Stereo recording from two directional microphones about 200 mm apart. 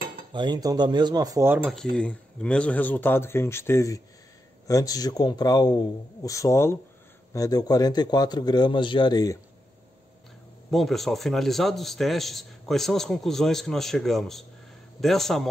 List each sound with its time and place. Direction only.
0.3 s cutlery: 20° right (ahead or behind); by 1.9 s 5° right (ahead or behind)
2.0 s speech: 5° left (ahead or behind)
10.7 s a man's voice: centre (ahead or behind)